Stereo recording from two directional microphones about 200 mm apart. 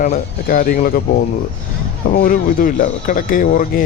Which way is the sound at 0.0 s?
45° left (ahead or behind).